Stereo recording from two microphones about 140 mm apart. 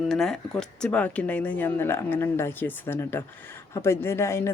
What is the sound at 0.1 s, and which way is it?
Speech, 5° left (ahead or behind).